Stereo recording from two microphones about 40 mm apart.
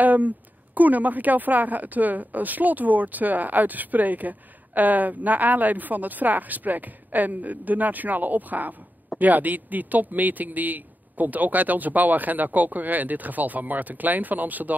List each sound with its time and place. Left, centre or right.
0.0 s a woman's voice: right